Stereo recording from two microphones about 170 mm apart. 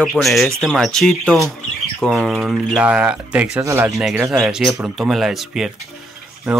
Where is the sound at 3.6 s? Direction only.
20° right (ahead or behind).